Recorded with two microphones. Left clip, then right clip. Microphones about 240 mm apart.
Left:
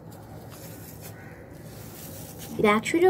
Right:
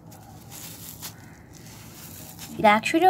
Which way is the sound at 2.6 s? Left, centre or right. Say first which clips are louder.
Right 3 dB; right.